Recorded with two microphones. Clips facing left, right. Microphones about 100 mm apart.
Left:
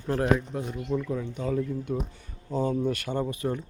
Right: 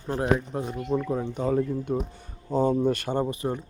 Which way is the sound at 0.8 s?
40° right (ahead or behind).